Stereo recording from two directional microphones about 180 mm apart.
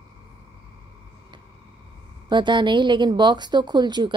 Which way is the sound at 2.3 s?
25° right (ahead or behind).